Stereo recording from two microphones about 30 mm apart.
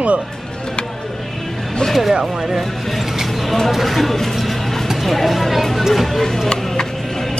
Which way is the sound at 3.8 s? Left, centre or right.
Centre.